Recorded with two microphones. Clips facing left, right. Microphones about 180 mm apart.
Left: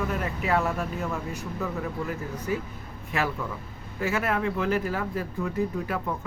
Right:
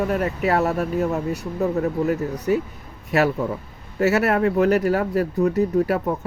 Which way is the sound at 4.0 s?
75° right (ahead or behind).